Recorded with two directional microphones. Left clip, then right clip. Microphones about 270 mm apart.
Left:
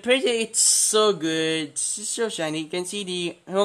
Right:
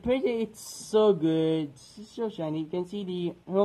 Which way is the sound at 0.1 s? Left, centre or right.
Centre.